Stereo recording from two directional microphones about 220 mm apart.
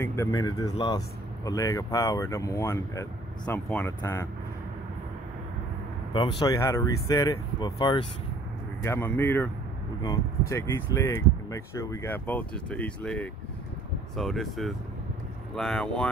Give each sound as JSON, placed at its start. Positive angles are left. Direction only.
{"t": 0.0, "sound": "speech", "side_deg": 15}
{"t": 6.1, "sound": "speech", "side_deg": 20}
{"t": 8.8, "sound": "speech", "side_deg": 10}